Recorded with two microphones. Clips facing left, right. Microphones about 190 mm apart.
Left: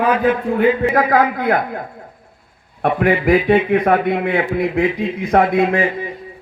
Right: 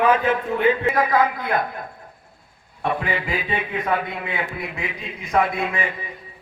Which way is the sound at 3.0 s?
70° left (ahead or behind).